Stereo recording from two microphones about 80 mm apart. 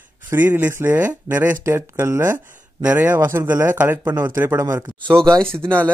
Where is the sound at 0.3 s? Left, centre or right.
Right.